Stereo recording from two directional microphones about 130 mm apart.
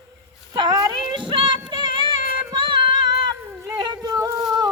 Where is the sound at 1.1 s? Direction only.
35° right (ahead or behind).